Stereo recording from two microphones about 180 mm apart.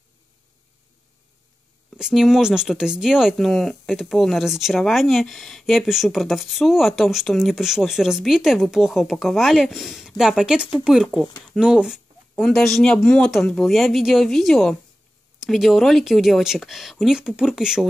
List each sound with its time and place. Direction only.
2.0 s speech: 5° right (ahead or behind)